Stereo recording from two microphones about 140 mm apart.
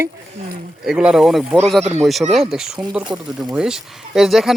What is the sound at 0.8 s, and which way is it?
Speech, 5° right (ahead or behind).